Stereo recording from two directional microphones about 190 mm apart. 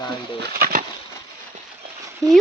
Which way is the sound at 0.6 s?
45° right (ahead or behind).